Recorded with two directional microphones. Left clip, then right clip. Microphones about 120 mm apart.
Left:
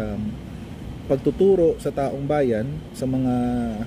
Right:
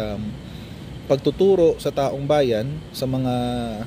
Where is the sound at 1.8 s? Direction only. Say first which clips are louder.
Right 2 dB; 15° left (ahead or behind).